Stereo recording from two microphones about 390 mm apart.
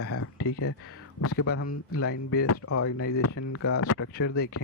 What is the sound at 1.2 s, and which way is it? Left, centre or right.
Speech, left.